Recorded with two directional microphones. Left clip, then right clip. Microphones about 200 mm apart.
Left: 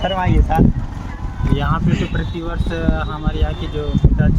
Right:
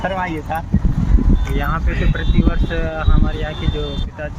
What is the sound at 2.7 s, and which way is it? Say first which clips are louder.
Speech: left 1 dB; 10° left (ahead or behind).